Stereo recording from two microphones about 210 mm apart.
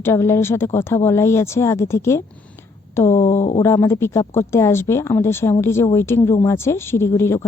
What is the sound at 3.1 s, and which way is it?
Speech, 35° left (ahead or behind).